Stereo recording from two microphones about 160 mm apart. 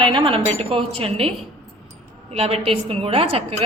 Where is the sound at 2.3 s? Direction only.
40° right (ahead or behind).